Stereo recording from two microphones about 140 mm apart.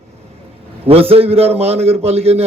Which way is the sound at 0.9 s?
45° right (ahead or behind).